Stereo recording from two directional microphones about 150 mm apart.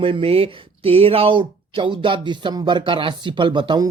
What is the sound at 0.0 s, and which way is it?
Speech, 40° right (ahead or behind).